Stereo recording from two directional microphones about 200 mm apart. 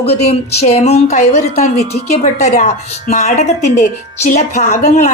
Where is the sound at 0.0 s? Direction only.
30° left (ahead or behind).